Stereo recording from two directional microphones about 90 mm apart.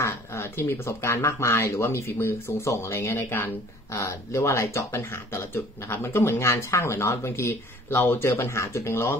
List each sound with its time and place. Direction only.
0.0 s speech: 30° left (ahead or behind)